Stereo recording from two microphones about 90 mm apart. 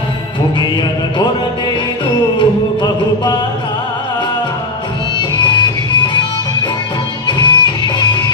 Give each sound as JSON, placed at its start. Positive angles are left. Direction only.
{"t": 0.6, "sound": "music", "side_deg": 60}
{"t": 5.1, "sound": "music", "side_deg": 60}
{"t": 7.3, "sound": "music", "side_deg": 60}